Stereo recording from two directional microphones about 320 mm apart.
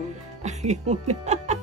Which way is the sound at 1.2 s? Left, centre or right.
Right.